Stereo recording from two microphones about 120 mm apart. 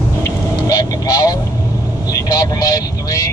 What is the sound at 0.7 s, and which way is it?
Vehicle, 30° left (ahead or behind).